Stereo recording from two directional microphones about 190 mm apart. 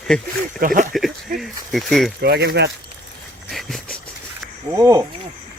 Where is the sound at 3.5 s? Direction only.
Centre (ahead or behind).